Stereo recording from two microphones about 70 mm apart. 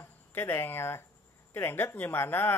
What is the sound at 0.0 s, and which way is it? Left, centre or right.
Speech, left.